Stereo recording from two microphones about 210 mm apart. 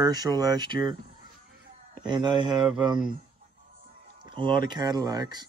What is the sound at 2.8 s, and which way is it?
Speech, 20° right (ahead or behind).